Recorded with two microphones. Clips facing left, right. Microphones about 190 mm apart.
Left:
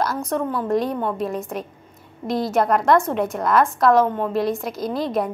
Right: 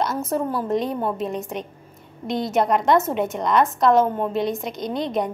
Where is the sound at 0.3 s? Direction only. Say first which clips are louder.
Left 2 dB; 5° right (ahead or behind).